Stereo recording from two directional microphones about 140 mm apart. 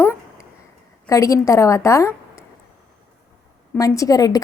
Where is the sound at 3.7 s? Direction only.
25° left (ahead or behind).